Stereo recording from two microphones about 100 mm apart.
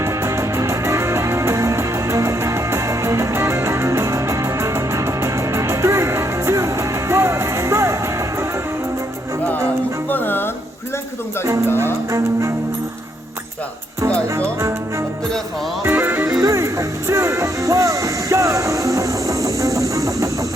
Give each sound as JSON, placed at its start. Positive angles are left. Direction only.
{"t": 0.0, "sound": "music", "side_deg": -30}
{"t": 10.1, "sound": "music", "side_deg": 20}
{"t": 11.4, "sound": "speech", "side_deg": -30}
{"t": 14.6, "sound": "music", "side_deg": -30}
{"t": 15.8, "sound": "music", "side_deg": -20}
{"t": 16.2, "sound": "music", "side_deg": -30}